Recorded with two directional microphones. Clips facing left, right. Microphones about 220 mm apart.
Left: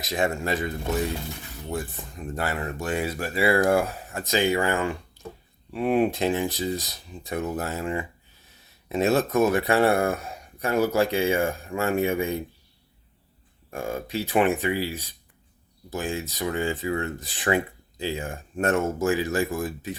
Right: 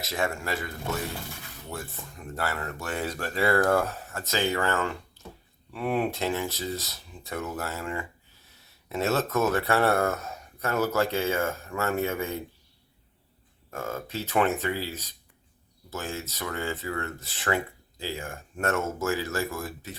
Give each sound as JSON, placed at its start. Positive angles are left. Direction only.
{"t": 0.0, "sound": "speech", "side_deg": 15}
{"t": 13.7, "sound": "speech", "side_deg": 15}